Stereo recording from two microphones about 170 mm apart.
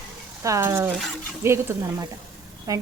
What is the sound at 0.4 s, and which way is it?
Speech, 15° right (ahead or behind).